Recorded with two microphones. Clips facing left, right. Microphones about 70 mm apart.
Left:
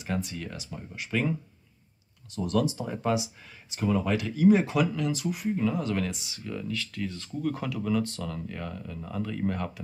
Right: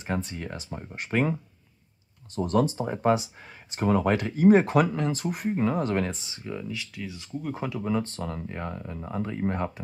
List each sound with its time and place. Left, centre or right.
0.0 s speech: right
2.3 s speech: right